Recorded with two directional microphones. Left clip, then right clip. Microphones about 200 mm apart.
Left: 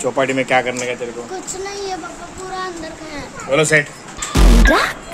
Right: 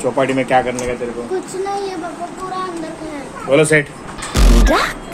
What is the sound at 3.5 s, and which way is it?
A man's voice, centre (ahead or behind).